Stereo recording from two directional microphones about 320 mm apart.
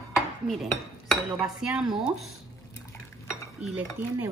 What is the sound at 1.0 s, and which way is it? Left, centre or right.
Speech, centre.